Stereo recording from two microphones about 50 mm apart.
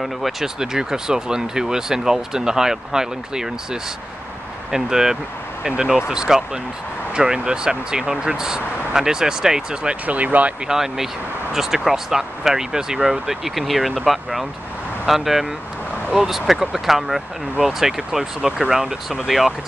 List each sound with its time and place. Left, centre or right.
0.0 s speech: centre
4.6 s speech: centre
10.0 s speech: right
10.7 s speech: centre